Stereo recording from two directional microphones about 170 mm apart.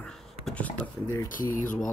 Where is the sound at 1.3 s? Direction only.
50° left (ahead or behind).